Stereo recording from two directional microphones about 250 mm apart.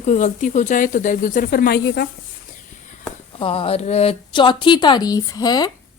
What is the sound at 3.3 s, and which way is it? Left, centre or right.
A woman's voice, left.